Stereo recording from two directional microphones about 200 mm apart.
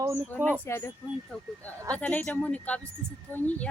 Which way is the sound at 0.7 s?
15° left (ahead or behind).